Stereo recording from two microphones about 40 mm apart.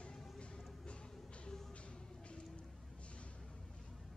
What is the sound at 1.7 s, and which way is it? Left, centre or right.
Music, left.